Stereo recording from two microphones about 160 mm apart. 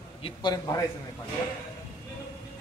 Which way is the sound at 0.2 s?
30° left (ahead or behind).